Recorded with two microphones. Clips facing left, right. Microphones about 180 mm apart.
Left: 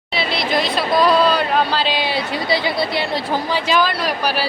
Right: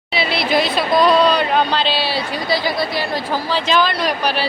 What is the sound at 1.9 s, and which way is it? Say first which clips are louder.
Chatter: even; 20° left (ahead or behind).